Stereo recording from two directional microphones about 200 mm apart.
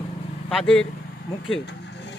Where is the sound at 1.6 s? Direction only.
60° left (ahead or behind).